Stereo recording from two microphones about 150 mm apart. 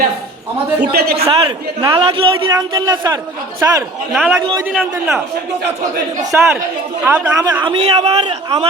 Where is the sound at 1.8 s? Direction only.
35° right (ahead or behind).